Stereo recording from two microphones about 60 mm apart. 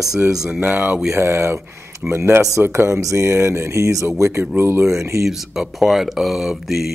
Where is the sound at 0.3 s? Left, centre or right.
Centre.